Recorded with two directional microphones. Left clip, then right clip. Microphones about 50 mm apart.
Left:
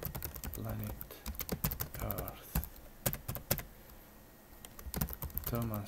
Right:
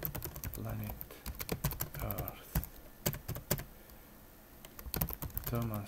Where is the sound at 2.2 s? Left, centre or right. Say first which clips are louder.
Even; centre.